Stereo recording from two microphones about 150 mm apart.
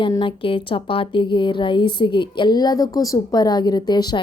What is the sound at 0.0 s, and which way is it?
A woman's voice, 30° left (ahead or behind).